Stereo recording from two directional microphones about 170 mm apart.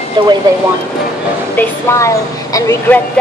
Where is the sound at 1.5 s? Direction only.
20° left (ahead or behind).